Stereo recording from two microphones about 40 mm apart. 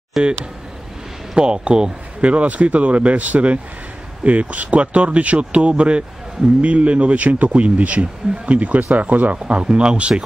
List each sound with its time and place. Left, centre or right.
0.2 s speech: centre
1.3 s speech: right